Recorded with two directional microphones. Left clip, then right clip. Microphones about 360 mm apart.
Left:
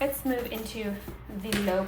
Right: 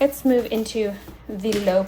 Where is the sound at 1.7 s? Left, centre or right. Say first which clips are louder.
Right 9 dB; right.